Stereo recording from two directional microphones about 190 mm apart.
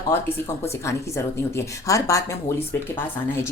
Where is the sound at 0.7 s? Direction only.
15° left (ahead or behind).